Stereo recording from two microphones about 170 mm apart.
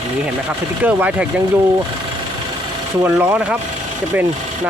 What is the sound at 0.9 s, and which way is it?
Speech, 10° right (ahead or behind).